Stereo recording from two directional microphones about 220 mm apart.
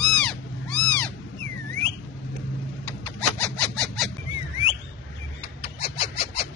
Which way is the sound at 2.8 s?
5° left (ahead or behind).